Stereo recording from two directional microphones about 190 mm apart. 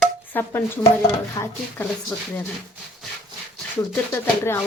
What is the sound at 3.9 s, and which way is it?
Speech, 10° left (ahead or behind).